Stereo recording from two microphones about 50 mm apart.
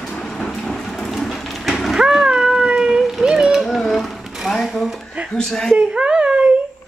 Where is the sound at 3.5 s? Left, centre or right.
Centre.